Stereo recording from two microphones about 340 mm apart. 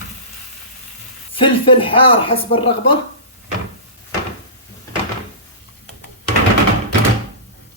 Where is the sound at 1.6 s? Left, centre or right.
Centre.